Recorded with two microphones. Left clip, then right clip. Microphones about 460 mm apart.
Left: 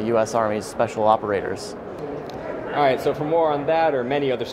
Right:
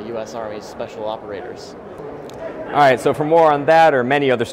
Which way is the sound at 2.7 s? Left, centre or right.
Right.